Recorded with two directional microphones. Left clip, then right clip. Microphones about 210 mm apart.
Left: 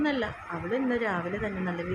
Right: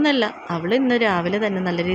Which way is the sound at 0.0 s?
30° right (ahead or behind).